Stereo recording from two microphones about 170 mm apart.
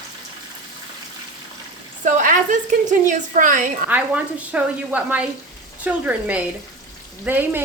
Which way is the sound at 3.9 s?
10° right (ahead or behind).